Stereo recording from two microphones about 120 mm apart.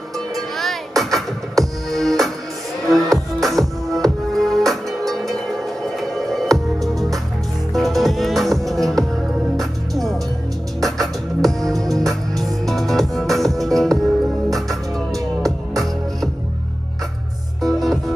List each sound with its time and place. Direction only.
0.6 s music: centre (ahead or behind)
15.1 s music: 30° right (ahead or behind)
17.6 s music: centre (ahead or behind)